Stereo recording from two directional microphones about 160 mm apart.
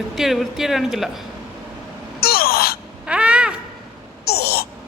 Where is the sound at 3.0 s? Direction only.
5° right (ahead or behind).